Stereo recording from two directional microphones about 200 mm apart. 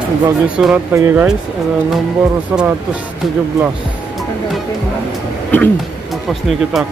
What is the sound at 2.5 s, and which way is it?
Speech, 5° right (ahead or behind).